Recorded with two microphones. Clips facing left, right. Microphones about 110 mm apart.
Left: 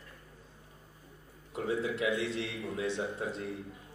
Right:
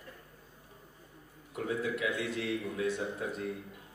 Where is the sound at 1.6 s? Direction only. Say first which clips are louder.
Left 2 dB; 30° left (ahead or behind).